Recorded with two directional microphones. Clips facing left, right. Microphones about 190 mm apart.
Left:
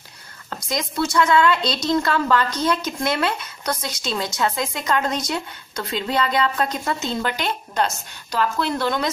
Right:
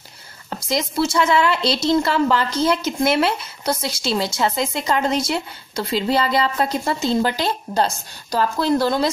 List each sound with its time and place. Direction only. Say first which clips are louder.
0.7 s speech: right 3 dB; 25° right (ahead or behind)